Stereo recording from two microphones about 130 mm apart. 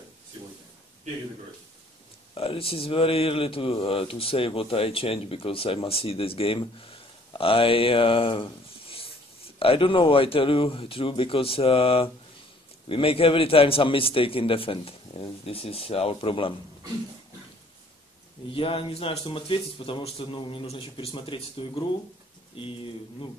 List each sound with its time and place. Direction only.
2.3 s speech: 45° left (ahead or behind)
18.5 s speech: 45° left (ahead or behind)